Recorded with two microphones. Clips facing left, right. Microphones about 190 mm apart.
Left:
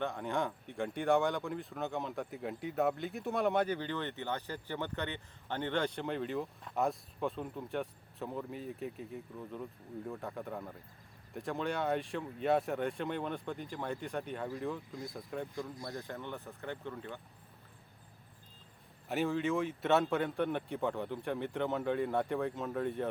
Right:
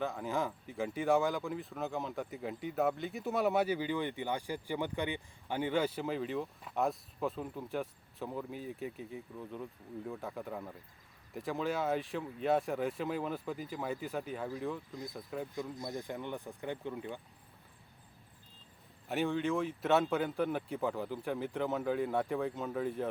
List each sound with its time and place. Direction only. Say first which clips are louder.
0.0 s speech: even; centre (ahead or behind)
15.8 s speech: right 2 dB; 20° right (ahead or behind)
19.0 s speech: even; centre (ahead or behind)